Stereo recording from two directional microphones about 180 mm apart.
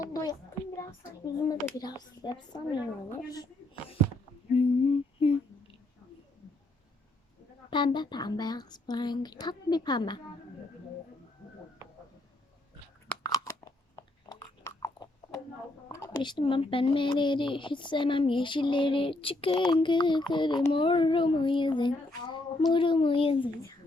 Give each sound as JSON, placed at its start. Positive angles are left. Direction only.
{"t": 0.0, "sound": "a sound", "side_deg": 20}
{"t": 0.8, "sound": "speech", "side_deg": 20}
{"t": 4.5, "sound": "a sound", "side_deg": 35}
{"t": 7.7, "sound": "speech", "side_deg": 25}
{"t": 13.2, "sound": "crunch", "side_deg": 20}
{"t": 15.9, "sound": "speech", "side_deg": 20}